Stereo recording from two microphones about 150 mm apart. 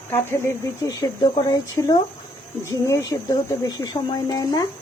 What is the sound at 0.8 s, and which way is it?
Speech, 25° left (ahead or behind).